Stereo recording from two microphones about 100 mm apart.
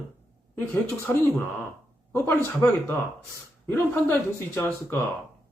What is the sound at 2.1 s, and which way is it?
Speech, 25° left (ahead or behind).